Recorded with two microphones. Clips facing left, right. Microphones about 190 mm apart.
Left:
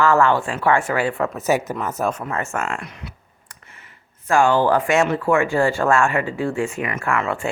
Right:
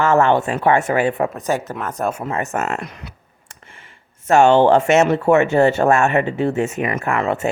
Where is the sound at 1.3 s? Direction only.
10° left (ahead or behind).